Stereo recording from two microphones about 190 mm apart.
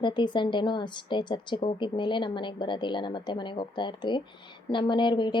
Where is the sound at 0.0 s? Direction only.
25° left (ahead or behind).